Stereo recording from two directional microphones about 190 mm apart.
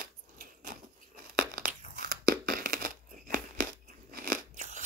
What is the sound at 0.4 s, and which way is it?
Tearing, 45° right (ahead or behind).